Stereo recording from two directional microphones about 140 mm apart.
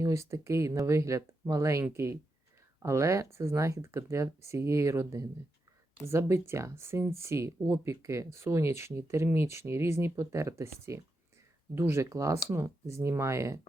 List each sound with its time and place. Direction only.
0.0 s speech: 20° right (ahead or behind)